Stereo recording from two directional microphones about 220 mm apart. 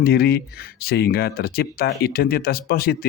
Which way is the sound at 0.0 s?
45° left (ahead or behind).